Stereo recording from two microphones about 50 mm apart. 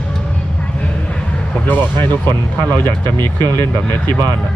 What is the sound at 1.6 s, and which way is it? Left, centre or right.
Speech, left.